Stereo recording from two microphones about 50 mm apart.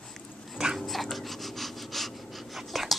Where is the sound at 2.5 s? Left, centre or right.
Centre.